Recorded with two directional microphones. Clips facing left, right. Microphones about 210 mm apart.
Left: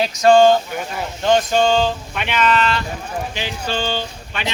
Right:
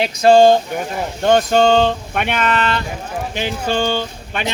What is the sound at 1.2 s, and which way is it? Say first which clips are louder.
Speech: right 3 dB; 55° right (ahead or behind).